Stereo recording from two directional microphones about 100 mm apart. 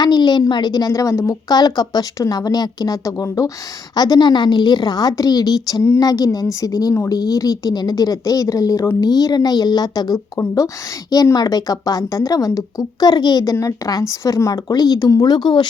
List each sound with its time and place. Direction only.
0.0 s a woman's voice: 45° left (ahead or behind); by 1.4 s 30° left (ahead or behind)
1.5 s a woman's voice: 45° left (ahead or behind)
9.0 s a woman's voice: 40° left (ahead or behind)